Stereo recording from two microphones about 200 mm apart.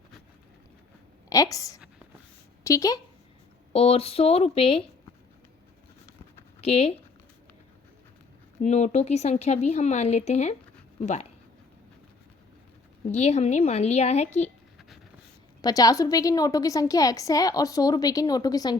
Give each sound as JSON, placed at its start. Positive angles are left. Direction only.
{"t": 1.3, "sound": "a woman's voice", "side_deg": 15}
{"t": 3.7, "sound": "speech", "side_deg": 30}
{"t": 6.6, "sound": "speech", "side_deg": 30}
{"t": 8.6, "sound": "speech", "side_deg": 35}
{"t": 13.1, "sound": "speech", "side_deg": 35}
{"t": 15.6, "sound": "a woman's voice", "side_deg": 20}